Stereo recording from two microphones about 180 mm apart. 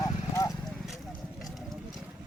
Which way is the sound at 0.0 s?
20° left (ahead or behind).